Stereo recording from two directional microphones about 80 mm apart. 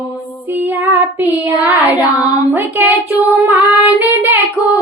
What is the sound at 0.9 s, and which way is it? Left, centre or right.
Child singing, right.